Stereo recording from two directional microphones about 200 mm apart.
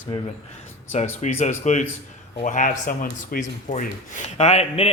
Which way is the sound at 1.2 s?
35° left (ahead or behind).